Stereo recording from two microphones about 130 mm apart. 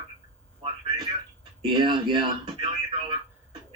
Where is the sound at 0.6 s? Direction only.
40° right (ahead or behind).